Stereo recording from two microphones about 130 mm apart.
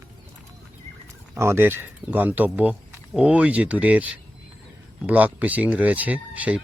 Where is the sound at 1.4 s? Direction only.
20° right (ahead or behind).